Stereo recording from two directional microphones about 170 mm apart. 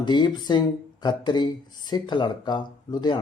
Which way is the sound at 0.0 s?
25° left (ahead or behind).